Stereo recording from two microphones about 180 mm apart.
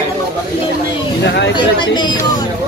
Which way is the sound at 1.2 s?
75° left (ahead or behind).